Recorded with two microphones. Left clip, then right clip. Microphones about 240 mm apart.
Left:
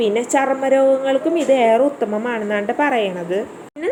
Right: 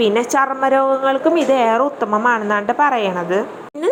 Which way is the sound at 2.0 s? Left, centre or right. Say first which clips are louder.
Right 5 dB; right.